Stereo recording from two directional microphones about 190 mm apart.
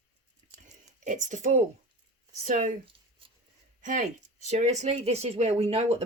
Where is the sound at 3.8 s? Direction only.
40° right (ahead or behind).